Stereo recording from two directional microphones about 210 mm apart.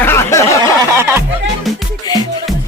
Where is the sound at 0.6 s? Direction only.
15° right (ahead or behind).